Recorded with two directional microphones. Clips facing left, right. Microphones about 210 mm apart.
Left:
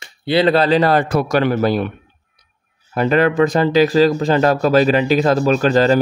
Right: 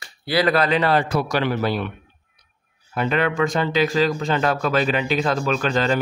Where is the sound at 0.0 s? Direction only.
25° left (ahead or behind); by 1.9 s 45° left (ahead or behind).